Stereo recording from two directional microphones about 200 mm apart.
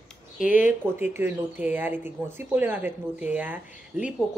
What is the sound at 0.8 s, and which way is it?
Speech, 10° right (ahead or behind).